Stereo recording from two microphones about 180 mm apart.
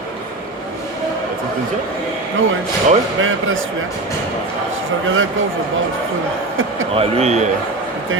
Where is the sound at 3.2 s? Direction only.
90° right.